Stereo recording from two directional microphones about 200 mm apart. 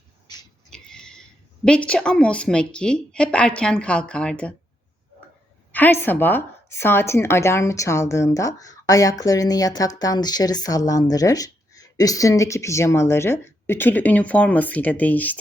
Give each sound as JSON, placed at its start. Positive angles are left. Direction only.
{"t": 0.7, "sound": "a sound", "side_deg": 5}
{"t": 1.6, "sound": "a woman's voice", "side_deg": 5}
{"t": 5.7, "sound": "a woman's voice", "side_deg": 10}